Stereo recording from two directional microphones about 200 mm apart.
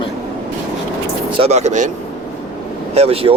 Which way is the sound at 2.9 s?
30° right (ahead or behind).